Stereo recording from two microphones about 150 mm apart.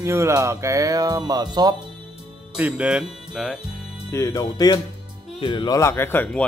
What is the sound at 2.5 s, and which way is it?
Speech, 5° right (ahead or behind).